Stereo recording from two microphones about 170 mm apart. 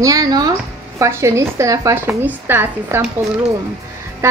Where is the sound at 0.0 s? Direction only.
20° right (ahead or behind).